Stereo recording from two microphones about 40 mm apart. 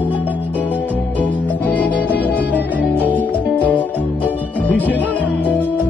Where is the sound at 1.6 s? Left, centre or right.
Left.